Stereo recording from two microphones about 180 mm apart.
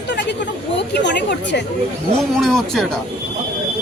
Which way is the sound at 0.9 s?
75° left (ahead or behind).